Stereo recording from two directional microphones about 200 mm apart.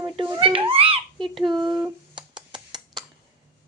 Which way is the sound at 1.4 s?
20° right (ahead or behind).